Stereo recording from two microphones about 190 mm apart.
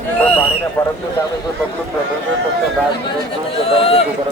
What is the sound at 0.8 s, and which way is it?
Speech, 10° left (ahead or behind).